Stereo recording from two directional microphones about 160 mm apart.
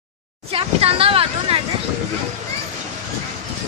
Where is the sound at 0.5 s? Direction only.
35° right (ahead or behind).